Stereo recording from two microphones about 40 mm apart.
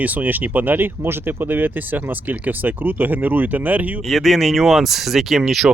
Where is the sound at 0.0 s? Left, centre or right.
Right.